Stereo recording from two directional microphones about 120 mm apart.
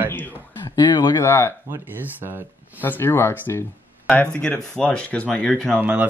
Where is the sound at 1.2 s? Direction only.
20° left (ahead or behind).